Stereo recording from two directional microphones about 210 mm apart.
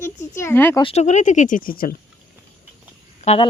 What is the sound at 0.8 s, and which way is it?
Speech, 30° left (ahead or behind).